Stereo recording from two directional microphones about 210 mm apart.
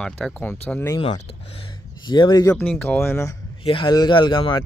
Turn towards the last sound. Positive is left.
turn(degrees=20)  # may be behind; listen again after turning